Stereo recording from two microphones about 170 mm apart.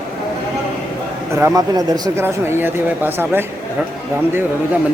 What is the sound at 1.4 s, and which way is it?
Speech, 20° right (ahead or behind).